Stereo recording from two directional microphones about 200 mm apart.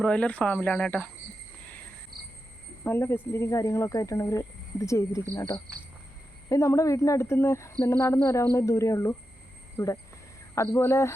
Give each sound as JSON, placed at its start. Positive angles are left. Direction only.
{"t": 0.0, "sound": "speech", "side_deg": 5}
{"t": 2.1, "sound": "cricket", "side_deg": -50}
{"t": 2.8, "sound": "speech", "side_deg": 10}